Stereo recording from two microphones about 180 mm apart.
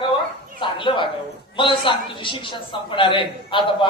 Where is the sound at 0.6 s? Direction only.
25° left (ahead or behind).